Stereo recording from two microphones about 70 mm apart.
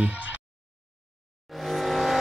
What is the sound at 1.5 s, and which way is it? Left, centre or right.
Vehicle, centre.